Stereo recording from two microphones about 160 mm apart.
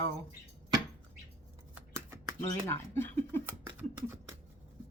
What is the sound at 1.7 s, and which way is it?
Shuffling cards, 15° right (ahead or behind).